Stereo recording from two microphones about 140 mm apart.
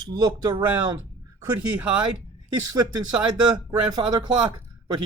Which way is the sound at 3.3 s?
30° right (ahead or behind).